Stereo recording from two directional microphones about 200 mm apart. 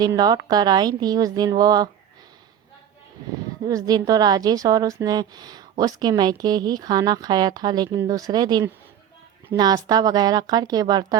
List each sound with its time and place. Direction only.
0.0 s a woman's voice: 20° right (ahead or behind)
3.7 s a woman's voice: 20° right (ahead or behind)